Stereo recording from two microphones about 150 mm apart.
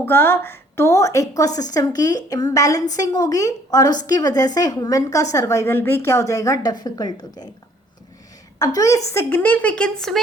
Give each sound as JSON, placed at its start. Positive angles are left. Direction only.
{"t": 0.0, "sound": "a woman's voice", "side_deg": 15}
{"t": 8.5, "sound": "a woman's voice", "side_deg": 25}